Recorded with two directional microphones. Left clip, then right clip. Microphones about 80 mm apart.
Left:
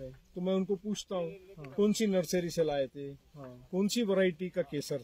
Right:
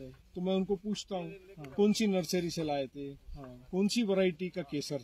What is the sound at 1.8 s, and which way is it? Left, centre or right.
Speech, left.